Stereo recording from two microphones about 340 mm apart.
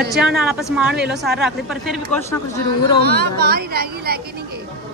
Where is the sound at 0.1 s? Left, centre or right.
Centre.